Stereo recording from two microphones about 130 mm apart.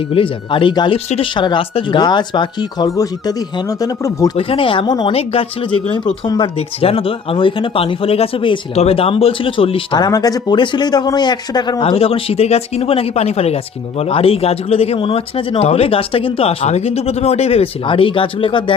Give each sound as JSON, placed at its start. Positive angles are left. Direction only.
{"t": 0.1, "sound": "speech", "side_deg": 40}
{"t": 0.9, "sound": "speech", "side_deg": 50}
{"t": 1.4, "sound": "speech", "side_deg": 40}
{"t": 4.4, "sound": "speech", "side_deg": 45}
{"t": 5.1, "sound": "speech", "side_deg": 50}
{"t": 6.2, "sound": "speech", "side_deg": 35}
{"t": 6.6, "sound": "speech", "side_deg": 45}
{"t": 10.1, "sound": "speech", "side_deg": 30}